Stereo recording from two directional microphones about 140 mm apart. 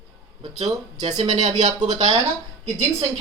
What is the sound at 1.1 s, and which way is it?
Speech, 30° right (ahead or behind).